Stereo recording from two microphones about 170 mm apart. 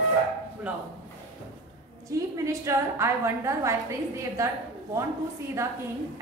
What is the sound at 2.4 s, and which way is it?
A woman's voice, 15° right (ahead or behind).